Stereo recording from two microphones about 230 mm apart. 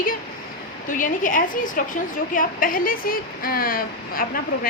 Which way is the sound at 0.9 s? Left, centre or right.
Left.